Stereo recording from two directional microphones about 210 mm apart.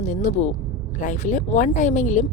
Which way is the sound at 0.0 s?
35° left (ahead or behind).